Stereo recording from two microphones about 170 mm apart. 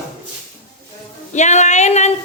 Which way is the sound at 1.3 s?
45° left (ahead or behind).